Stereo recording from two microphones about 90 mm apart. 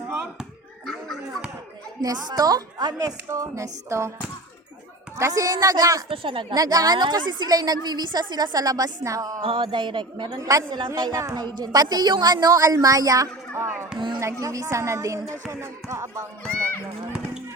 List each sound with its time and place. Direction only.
0.9 s a sound: 5° left (ahead or behind)
2.0 s a woman's voice: 45° right (ahead or behind)
3.2 s a woman's voice: 35° right (ahead or behind)
5.1 s a woman's voice: 40° right (ahead or behind)
6.1 s a woman's voice: 75° right (ahead or behind)
6.5 s a woman's voice: 45° right (ahead or behind)
9.4 s speech: 75° right (ahead or behind)
10.2 s a woman's voice: 45° right (ahead or behind)
10.7 s speech: 55° right (ahead or behind)
11.2 s a woman's voice: 40° right (ahead or behind)
11.4 s a woman's voice: 50° right (ahead or behind); by 16.2 s 35° right (ahead or behind)